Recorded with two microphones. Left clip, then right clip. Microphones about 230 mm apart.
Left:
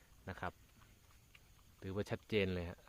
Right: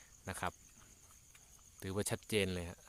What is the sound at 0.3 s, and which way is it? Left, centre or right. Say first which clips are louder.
Cricket: right 4 dB; right.